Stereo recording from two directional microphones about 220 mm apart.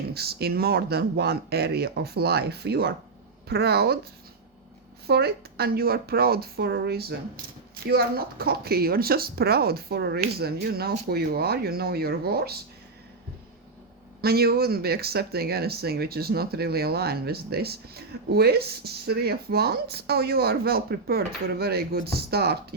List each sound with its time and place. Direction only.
0.1 s speech: 45° right (ahead or behind)
5.0 s speech: 45° right (ahead or behind)
14.2 s speech: 45° right (ahead or behind)